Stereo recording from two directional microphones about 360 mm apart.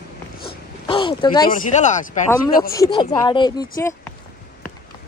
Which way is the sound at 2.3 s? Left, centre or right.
Centre.